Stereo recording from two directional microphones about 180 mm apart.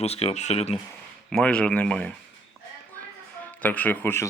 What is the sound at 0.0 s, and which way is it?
Speech, 35° left (ahead or behind).